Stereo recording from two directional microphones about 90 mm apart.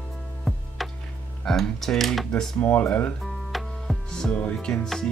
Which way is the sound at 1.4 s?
5° left (ahead or behind).